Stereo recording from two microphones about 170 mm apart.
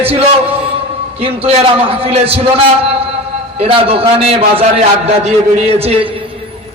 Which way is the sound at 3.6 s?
35° right (ahead or behind).